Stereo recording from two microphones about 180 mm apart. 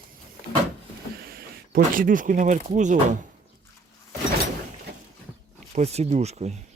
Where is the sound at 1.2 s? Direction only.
55° right (ahead or behind).